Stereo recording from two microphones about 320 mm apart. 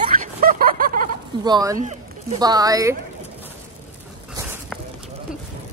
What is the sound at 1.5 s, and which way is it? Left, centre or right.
Speech, centre.